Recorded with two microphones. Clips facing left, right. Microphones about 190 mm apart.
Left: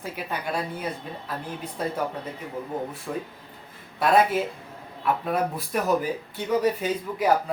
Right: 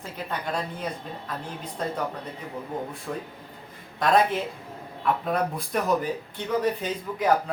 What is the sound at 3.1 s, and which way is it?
Speech, 5° left (ahead or behind).